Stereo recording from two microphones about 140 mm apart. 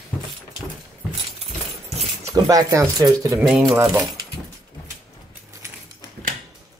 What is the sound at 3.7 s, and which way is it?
Speech, 15° right (ahead or behind).